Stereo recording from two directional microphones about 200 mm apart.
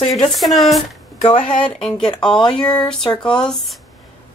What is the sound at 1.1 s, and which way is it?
Speech, 25° left (ahead or behind).